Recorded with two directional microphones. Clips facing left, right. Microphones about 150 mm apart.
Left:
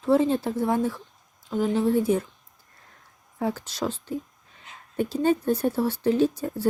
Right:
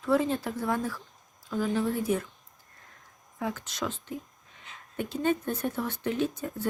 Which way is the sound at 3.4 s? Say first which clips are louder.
Left 5 dB; 35° left (ahead or behind).